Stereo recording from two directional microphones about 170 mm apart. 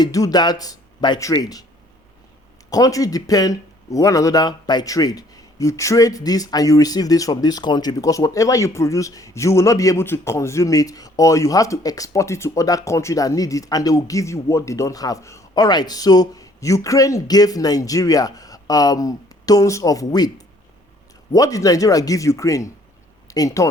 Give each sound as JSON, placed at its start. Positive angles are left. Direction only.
{"t": 0.0, "sound": "speech", "side_deg": 20}
{"t": 2.6, "sound": "speech", "side_deg": 20}
{"t": 21.3, "sound": "speech", "side_deg": 20}